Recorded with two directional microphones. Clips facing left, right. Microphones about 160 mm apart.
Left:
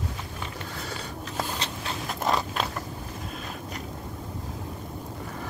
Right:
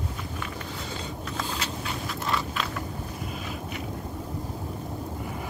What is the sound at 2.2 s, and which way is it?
Creak, 40° left (ahead or behind).